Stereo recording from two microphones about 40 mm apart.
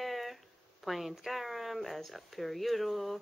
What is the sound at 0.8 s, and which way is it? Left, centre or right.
A woman's voice, centre.